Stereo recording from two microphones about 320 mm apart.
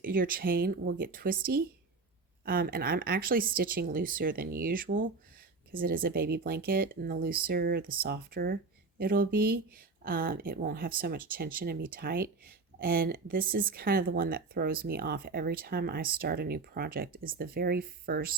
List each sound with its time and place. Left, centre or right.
0.0 s speech: right